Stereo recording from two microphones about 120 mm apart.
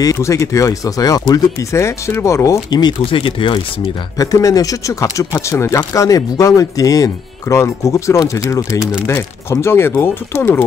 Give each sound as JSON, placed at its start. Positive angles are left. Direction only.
{"t": 0.0, "sound": "speech", "side_deg": 30}
{"t": 4.2, "sound": "speech", "side_deg": 30}